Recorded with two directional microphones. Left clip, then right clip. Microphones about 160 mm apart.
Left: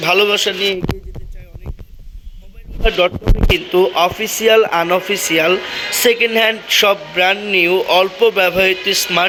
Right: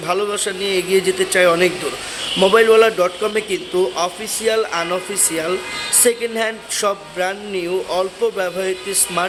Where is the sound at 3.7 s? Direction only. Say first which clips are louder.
Left 5 dB; 20° left (ahead or behind).